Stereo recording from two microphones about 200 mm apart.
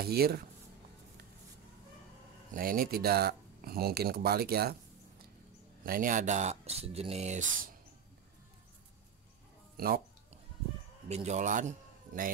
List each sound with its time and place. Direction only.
0.0 s speech: 50° right (ahead or behind)
2.5 s speech: 45° right (ahead or behind)
5.9 s speech: 45° right (ahead or behind)
9.8 s speech: 45° right (ahead or behind)
11.1 s a man's voice: 35° right (ahead or behind)